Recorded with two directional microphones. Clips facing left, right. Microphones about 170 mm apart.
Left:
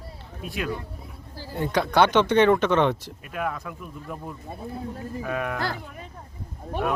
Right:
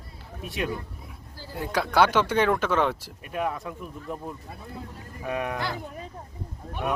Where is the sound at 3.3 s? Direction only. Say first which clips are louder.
Right 1 dB; 20° right (ahead or behind).